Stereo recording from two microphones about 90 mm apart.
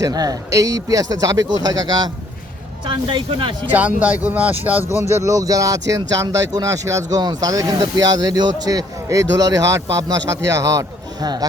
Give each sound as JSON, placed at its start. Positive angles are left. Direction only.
{"t": 0.0, "sound": "speech", "side_deg": -45}
{"t": 2.8, "sound": "speech", "side_deg": -65}
{"t": 3.7, "sound": "speech", "side_deg": -20}
{"t": 5.1, "sound": "speech", "side_deg": -35}